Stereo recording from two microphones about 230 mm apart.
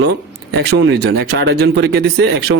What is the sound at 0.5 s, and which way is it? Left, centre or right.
Speech, right.